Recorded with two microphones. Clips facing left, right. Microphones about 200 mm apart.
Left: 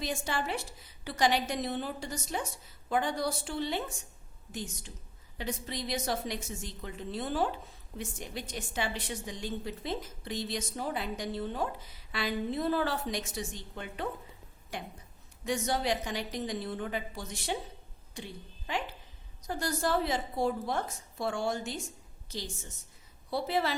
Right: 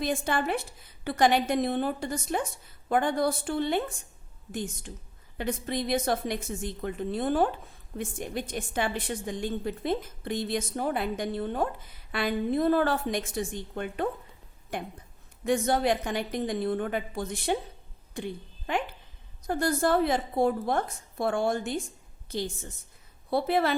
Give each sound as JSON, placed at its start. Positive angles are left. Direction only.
{"t": 0.0, "sound": "a woman's voice", "side_deg": -55}
{"t": 18.1, "sound": "a sound", "side_deg": -55}
{"t": 19.5, "sound": "a woman's voice", "side_deg": -55}